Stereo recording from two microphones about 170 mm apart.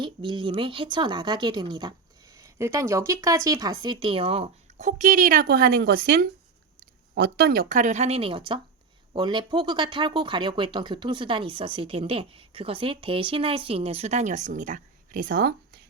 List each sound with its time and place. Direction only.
0.0 s a woman's voice: 30° right (ahead or behind); by 15.8 s 70° right (ahead or behind)